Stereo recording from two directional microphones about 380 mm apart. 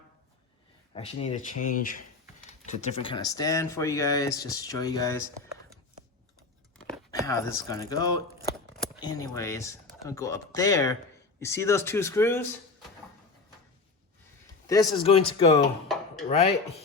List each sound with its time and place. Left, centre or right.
0.9 s speech: centre
7.1 s speech: centre
14.7 s speech: centre